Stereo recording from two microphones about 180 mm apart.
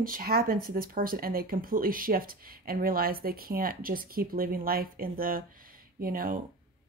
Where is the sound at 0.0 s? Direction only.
50° right (ahead or behind).